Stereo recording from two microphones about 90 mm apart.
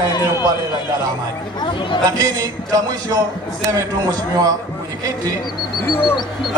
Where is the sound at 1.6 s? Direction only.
65° left (ahead or behind).